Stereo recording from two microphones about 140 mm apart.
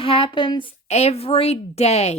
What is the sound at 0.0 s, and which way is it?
Speech, 40° left (ahead or behind).